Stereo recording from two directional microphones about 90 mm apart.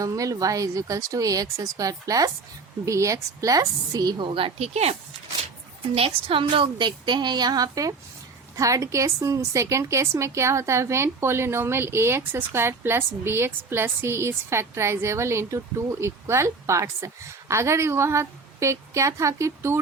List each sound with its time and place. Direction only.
0.0 s a woman's voice: 40° right (ahead or behind)
4.3 s a woman's voice: 80° right
5.9 s a woman's voice: 90° right; by 19.8 s 30° right (ahead or behind)